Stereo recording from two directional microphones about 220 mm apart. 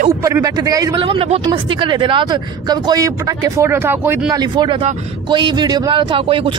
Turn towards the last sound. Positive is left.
turn(degrees=-25)  # may be behind; listen again after turning